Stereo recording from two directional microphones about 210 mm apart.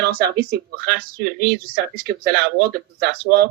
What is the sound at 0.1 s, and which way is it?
Speech, 50° right (ahead or behind).